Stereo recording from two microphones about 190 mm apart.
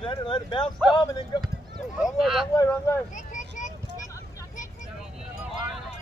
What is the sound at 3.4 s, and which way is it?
Vehicle, 40° left (ahead or behind).